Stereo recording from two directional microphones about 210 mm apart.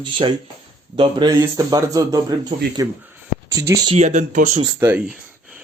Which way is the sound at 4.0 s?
35° right (ahead or behind).